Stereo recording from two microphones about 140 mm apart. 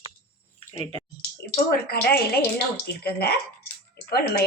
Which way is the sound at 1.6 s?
90° left.